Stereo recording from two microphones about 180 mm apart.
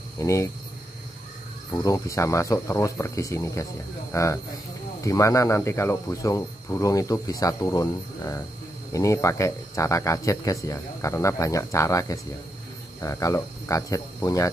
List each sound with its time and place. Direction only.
0.2 s speech: 15° left (ahead or behind)
1.7 s speech: 20° left (ahead or behind)